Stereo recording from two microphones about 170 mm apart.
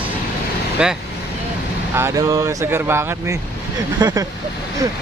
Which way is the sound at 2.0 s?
15° right (ahead or behind).